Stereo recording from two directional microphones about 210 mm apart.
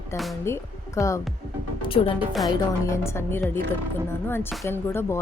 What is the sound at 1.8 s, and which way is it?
Speech, 25° left (ahead or behind).